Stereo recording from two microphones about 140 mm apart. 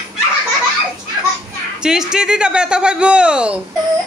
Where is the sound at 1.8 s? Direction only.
5° right (ahead or behind).